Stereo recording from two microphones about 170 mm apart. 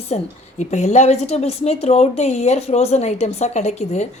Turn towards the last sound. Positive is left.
turn(degrees=40)  # may be behind; listen again after turning